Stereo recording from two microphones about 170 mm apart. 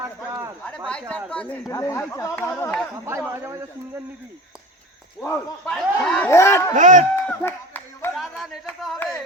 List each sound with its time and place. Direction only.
0.0 s speech: 15° right (ahead or behind)
0.9 s speech: 5° left (ahead or behind)
1.6 s speech: 20° left (ahead or behind)
3.1 s a man's voice: 15° right (ahead or behind)
5.2 s speech: 10° left (ahead or behind)
6.7 s speech: 50° right (ahead or behind)
7.3 s a sound: 10° left (ahead or behind)
8.1 s speech: centre (ahead or behind)